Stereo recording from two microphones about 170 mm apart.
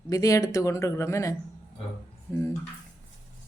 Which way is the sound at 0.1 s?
20° left (ahead or behind).